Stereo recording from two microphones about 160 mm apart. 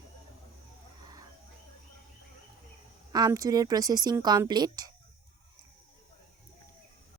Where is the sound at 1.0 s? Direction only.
25° right (ahead or behind).